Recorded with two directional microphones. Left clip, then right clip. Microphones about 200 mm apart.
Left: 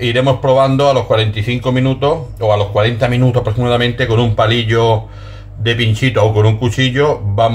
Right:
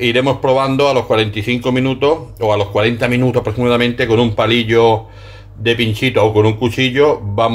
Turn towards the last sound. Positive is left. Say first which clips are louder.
# right 1 dB
turn(degrees=-25)  # may be behind; listen again after turning